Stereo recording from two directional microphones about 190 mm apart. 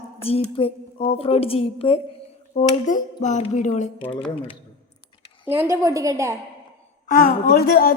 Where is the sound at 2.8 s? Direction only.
40° left (ahead or behind).